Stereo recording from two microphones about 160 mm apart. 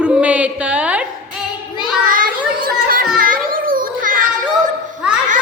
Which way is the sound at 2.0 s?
60° right (ahead or behind).